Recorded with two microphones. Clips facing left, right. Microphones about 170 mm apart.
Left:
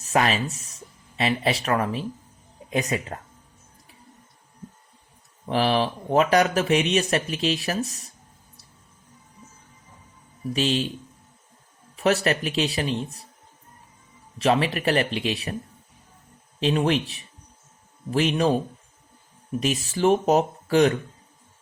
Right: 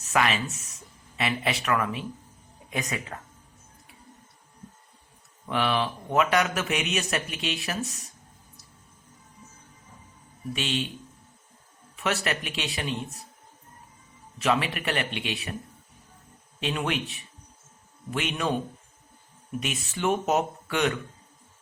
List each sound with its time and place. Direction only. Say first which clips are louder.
0.0 s speech: left 3 dB; 35° left (ahead or behind)
5.5 s speech: left 4 dB; 35° left (ahead or behind)
10.5 s speech: left 6 dB; 35° left (ahead or behind)
11.9 s speech: left 7 dB; 35° left (ahead or behind)
14.3 s speech: left 4 dB; 35° left (ahead or behind)
16.6 s speech: left 7 dB; 30° left (ahead or behind)